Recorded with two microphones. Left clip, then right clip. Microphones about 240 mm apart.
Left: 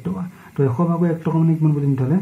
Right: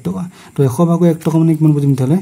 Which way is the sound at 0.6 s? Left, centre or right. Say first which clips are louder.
Right 6 dB; right.